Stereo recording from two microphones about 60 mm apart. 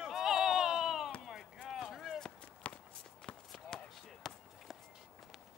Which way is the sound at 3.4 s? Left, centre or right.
Centre.